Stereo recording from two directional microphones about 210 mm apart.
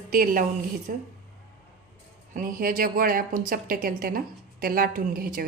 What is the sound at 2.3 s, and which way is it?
A woman's voice, 40° right (ahead or behind).